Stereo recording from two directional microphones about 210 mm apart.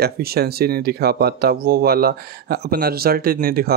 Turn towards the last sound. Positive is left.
turn(degrees=-45)  # may be behind; listen again after turning